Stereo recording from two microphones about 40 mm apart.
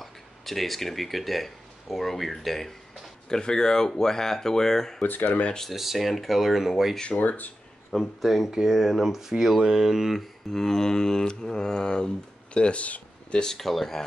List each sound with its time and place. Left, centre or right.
0.0 s speech: centre
3.3 s speech: centre
5.0 s speech: left
5.7 s speech: centre
7.2 s speech: left
8.2 s speech: centre
10.5 s speech: centre; by 13.0 s left
13.3 s speech: centre
13.6 s speech: centre